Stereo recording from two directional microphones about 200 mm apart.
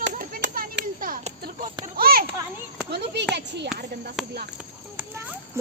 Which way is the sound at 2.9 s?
55° right (ahead or behind).